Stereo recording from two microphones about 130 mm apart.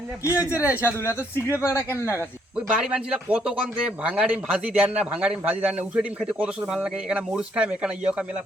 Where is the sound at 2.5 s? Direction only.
5° right (ahead or behind).